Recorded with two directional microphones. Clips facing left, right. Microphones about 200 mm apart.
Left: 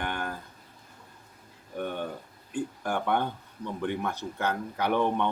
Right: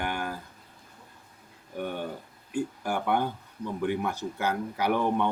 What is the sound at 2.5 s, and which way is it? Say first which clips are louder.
Speech: right 1 dB; 10° right (ahead or behind).